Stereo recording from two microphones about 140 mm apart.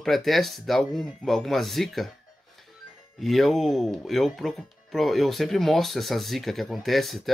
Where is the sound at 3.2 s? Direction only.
Centre (ahead or behind).